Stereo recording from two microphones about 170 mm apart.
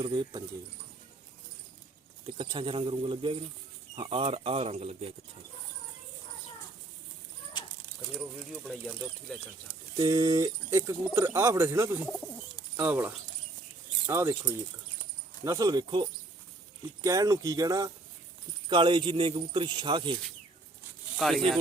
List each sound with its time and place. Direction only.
0.0 s speech: 30° right (ahead or behind)
2.2 s speech: 30° right (ahead or behind)
9.3 s speech: 5° left (ahead or behind)
10.0 s speech: 20° right (ahead or behind)
21.2 s speech: centre (ahead or behind)